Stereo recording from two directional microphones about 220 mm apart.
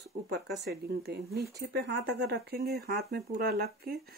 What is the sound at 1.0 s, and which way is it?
Speech, 50° right (ahead or behind).